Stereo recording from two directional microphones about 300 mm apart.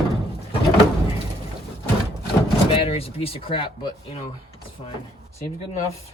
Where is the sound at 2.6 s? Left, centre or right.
Centre.